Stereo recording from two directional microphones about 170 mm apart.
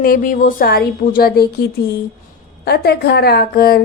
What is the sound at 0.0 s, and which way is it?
Speech, 55° left (ahead or behind).